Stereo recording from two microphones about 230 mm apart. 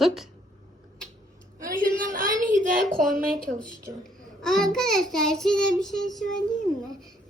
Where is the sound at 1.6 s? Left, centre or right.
Right.